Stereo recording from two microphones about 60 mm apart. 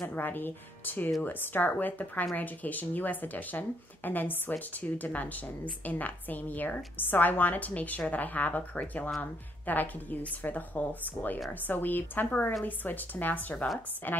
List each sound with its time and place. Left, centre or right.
0.1 s speech: left